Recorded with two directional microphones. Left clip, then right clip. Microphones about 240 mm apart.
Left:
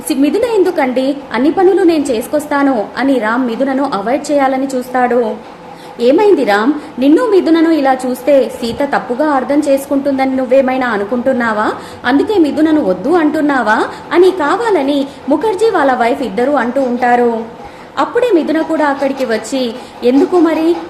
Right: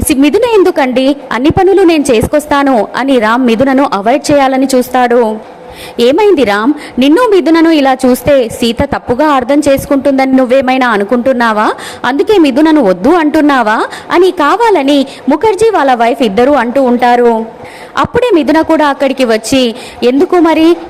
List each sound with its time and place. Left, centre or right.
0.1 s a woman's voice: right